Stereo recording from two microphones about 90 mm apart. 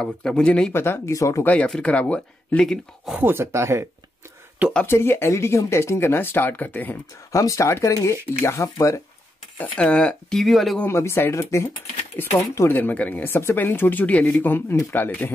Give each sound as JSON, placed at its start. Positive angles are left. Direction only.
{"t": 0.0, "sound": "speech", "side_deg": 10}
{"t": 0.7, "sound": "speech", "side_deg": 25}
{"t": 1.4, "sound": "speech", "side_deg": 15}
{"t": 3.2, "sound": "speech", "side_deg": -25}
{"t": 4.8, "sound": "speech", "side_deg": 25}
{"t": 7.3, "sound": "speech", "side_deg": 35}
{"t": 9.6, "sound": "speech", "side_deg": 15}
{"t": 10.4, "sound": "speech", "side_deg": 0}
{"t": 10.9, "sound": "speech", "side_deg": 30}
{"t": 12.7, "sound": "speech", "side_deg": 20}